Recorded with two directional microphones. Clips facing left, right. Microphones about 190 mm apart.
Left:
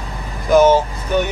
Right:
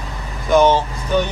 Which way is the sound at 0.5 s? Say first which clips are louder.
Left 2 dB; 10° left (ahead or behind).